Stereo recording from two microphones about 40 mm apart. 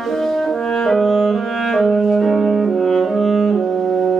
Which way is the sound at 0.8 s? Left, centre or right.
Centre.